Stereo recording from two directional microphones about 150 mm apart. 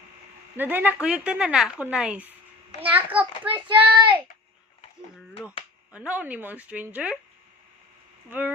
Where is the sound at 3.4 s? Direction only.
35° right (ahead or behind).